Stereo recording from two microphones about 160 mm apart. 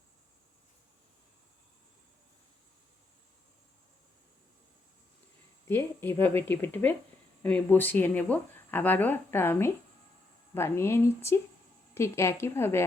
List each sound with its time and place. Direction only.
5.6 s speech: 15° left (ahead or behind)